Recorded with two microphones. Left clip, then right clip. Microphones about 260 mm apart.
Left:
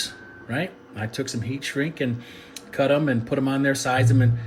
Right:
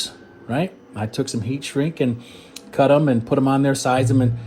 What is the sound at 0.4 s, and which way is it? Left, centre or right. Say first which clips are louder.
Speech: right 4 dB; centre.